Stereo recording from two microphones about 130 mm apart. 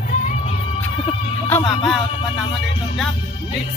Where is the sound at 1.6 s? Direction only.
45° left (ahead or behind).